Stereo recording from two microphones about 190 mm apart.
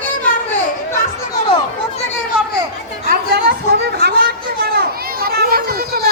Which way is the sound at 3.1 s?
60° right (ahead or behind).